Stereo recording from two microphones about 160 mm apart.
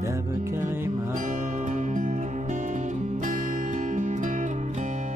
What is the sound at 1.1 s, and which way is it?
Music, 50° right (ahead or behind).